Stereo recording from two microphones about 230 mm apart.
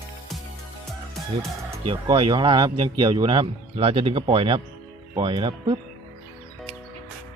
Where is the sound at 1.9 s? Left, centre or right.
Right.